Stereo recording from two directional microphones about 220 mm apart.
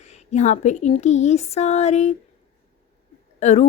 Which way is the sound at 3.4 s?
30° left (ahead or behind).